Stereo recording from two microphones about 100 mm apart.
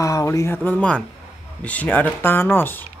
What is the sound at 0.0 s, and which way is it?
Speech, 35° left (ahead or behind).